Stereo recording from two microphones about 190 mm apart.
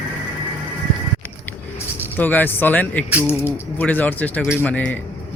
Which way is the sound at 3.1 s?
10° right (ahead or behind).